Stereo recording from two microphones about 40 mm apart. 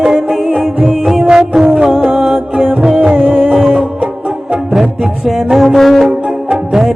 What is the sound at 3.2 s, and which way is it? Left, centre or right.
Music, right.